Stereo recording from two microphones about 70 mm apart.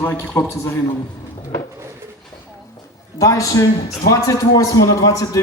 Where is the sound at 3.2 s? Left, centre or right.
Left.